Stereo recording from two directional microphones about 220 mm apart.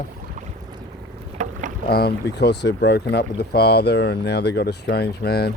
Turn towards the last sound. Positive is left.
turn(degrees=45)  # may be behind; listen again after turning